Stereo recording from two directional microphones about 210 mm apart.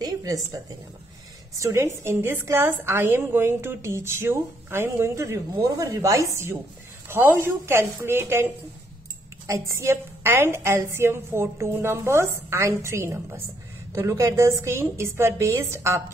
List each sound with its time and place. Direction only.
0.0 s a woman's voice: 20° right (ahead or behind)
1.6 s a woman's voice: 15° right (ahead or behind)
9.5 s a woman's voice: 15° right (ahead or behind)